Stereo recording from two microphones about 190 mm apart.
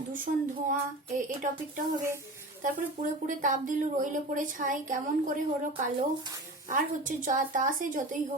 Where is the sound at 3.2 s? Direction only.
45° right (ahead or behind).